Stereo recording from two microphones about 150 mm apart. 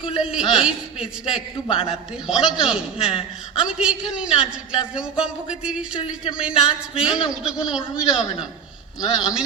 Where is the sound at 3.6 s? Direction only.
5° right (ahead or behind).